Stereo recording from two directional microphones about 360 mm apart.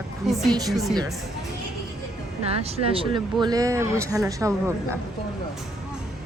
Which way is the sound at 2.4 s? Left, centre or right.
Centre.